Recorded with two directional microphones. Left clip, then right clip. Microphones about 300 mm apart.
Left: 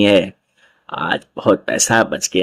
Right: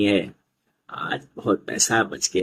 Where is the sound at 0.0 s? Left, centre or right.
Left.